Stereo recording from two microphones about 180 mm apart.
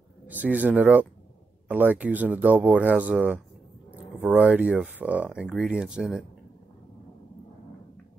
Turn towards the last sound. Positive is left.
turn(degrees=0)  # may be behind; listen again after turning